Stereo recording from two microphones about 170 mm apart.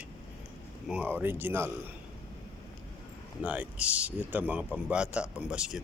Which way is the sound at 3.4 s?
10° right (ahead or behind).